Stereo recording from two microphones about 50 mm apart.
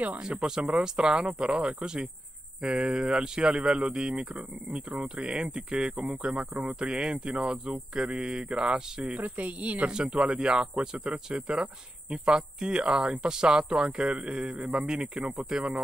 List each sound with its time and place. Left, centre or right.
0.2 s speech: right
9.0 s speech: right
9.8 s speech: centre